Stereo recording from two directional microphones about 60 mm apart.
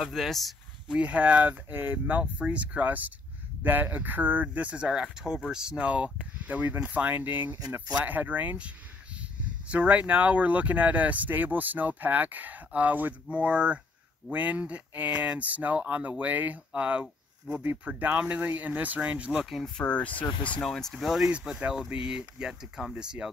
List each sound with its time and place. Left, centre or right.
0.0 s speech: centre
0.8 s speech: centre
19.8 s speech: left
20.6 s speech: centre
21.9 s speech: centre